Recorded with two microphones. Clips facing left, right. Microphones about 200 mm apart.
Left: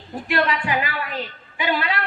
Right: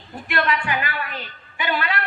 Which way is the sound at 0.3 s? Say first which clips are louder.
Left 1 dB; 30° left (ahead or behind).